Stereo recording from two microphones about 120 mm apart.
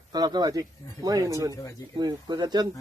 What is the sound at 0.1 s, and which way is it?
A man's voice, 35° right (ahead or behind).